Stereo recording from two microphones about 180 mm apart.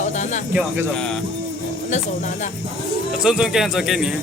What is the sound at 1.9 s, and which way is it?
Speech, 45° left (ahead or behind).